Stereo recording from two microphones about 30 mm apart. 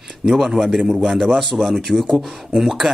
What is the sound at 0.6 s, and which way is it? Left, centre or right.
A man's voice, centre.